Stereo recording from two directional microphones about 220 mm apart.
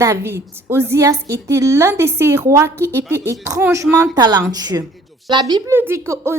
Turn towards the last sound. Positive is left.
turn(degrees=-10)  # may be behind; listen again after turning